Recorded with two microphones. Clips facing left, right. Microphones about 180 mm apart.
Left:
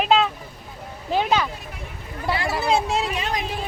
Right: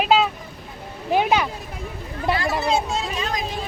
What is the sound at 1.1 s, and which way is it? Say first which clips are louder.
Speech: right 2 dB; 15° right (ahead or behind).